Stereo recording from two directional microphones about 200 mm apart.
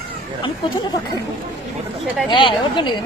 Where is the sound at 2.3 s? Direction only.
25° left (ahead or behind).